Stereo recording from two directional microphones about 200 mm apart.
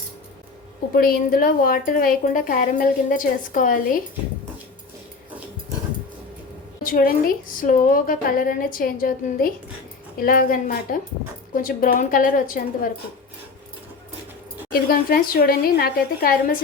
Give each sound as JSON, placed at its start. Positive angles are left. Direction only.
{"t": 0.9, "sound": "a woman's voice", "side_deg": 45}
{"t": 6.8, "sound": "a woman's voice", "side_deg": 45}
{"t": 14.7, "sound": "a woman's voice", "side_deg": 45}